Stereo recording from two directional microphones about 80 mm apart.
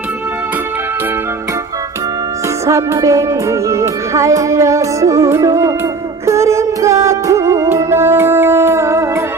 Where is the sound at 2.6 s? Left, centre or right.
Right.